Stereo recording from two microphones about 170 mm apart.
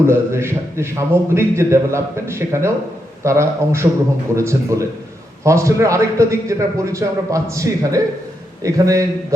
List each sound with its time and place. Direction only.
0.1 s a man's voice: 15° right (ahead or behind)